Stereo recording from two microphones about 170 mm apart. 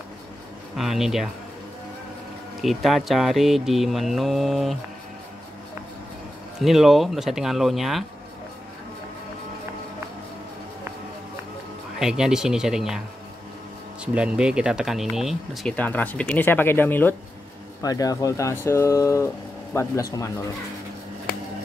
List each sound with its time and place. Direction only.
0.7 s speech: centre (ahead or behind)
2.6 s speech: centre (ahead or behind)
6.6 s speech: centre (ahead or behind)
12.0 s speech: 5° right (ahead or behind)
14.0 s speech: 5° right (ahead or behind); by 20.2 s 20° left (ahead or behind)